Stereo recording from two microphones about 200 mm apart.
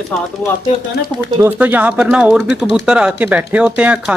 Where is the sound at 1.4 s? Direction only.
10° right (ahead or behind).